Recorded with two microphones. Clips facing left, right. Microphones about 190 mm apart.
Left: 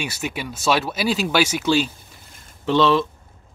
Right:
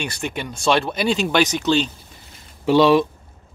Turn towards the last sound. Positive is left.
turn(degrees=-15)  # may be behind; listen again after turning